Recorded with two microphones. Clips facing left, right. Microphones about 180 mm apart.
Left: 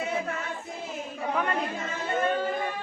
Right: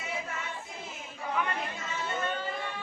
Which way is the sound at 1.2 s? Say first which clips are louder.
Left 4 dB; 55° left (ahead or behind).